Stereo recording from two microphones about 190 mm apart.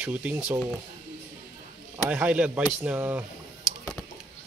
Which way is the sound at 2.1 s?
5° right (ahead or behind).